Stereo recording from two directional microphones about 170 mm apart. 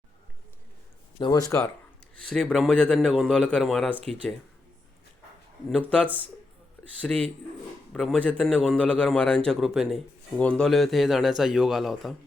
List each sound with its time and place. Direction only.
1.2 s speech: 20° left (ahead or behind)
2.3 s a man's voice: 5° left (ahead or behind)
5.7 s a man's voice: 5° left (ahead or behind)
7.1 s a man's voice: 5° left (ahead or behind)